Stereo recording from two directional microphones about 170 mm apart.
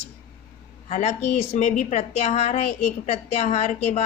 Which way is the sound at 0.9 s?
40° left (ahead or behind).